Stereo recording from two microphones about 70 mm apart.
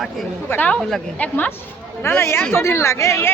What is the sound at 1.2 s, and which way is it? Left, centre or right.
Speech, left.